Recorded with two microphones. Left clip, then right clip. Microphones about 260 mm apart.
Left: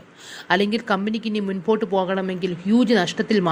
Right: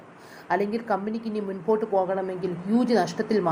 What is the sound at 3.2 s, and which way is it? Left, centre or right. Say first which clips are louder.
Speech: left 4 dB; left.